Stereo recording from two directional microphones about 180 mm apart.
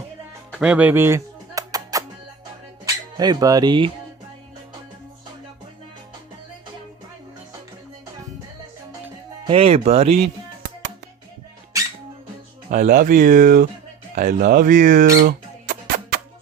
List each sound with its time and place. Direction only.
0.5 s music: 5° right (ahead or behind)
2.8 s speech: 20° right (ahead or behind)
9.5 s speech: 30° right (ahead or behind)
12.7 s speech: 45° right (ahead or behind)
14.2 s a sound: 50° right (ahead or behind)